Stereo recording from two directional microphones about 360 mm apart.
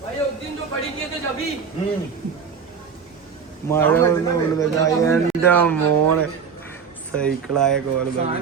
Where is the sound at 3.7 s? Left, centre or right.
Centre.